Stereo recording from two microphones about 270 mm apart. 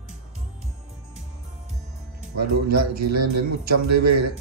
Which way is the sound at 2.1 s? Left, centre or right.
Right.